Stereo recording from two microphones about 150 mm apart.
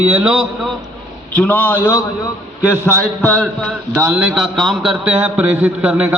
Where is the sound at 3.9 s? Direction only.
15° right (ahead or behind).